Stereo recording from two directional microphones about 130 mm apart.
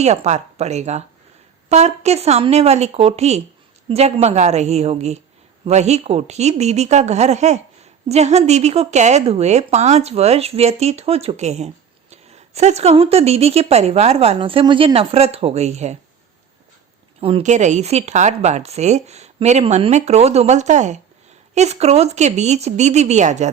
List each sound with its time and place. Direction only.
0.0 s a woman's voice: 60° right (ahead or behind)
17.2 s a woman's voice: 45° right (ahead or behind)
17.4 s speech: 65° right (ahead or behind)